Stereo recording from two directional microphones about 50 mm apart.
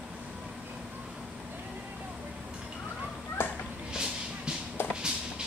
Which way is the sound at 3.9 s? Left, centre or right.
Centre.